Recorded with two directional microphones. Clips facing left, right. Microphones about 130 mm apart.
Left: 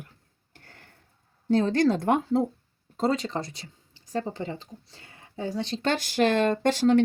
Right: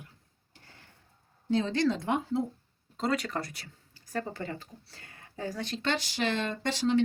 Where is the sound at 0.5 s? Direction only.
55° left (ahead or behind).